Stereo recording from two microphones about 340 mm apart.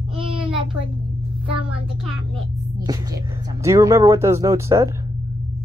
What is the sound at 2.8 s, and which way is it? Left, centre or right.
Speech, centre.